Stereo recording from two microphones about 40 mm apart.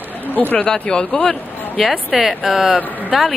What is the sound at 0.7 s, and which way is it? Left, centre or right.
Speech, centre.